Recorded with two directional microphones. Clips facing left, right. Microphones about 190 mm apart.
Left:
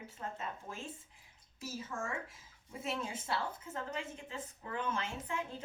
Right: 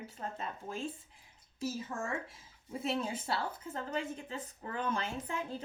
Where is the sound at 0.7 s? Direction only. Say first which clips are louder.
Right 6 dB; 30° right (ahead or behind).